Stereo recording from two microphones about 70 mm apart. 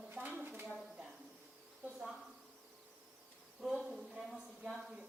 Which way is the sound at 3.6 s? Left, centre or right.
Centre.